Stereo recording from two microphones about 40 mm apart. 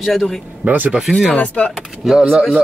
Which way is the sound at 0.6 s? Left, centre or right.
Right.